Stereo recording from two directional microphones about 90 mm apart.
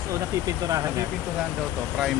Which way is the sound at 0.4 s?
40° right (ahead or behind).